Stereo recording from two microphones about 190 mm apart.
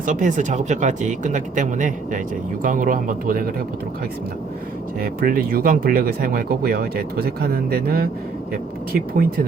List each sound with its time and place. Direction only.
0.0 s speech: 40° right (ahead or behind)
4.9 s speech: 50° right (ahead or behind)